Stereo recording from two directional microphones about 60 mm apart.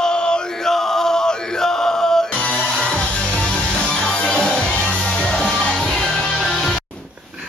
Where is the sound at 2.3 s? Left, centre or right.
Left; by 6.8 s centre.